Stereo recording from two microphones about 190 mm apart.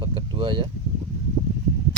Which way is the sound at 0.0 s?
25° right (ahead or behind).